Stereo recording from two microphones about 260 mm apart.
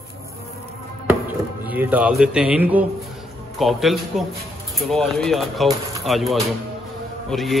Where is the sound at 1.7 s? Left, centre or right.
Centre.